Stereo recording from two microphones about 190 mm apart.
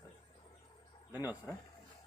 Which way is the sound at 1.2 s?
10° right (ahead or behind).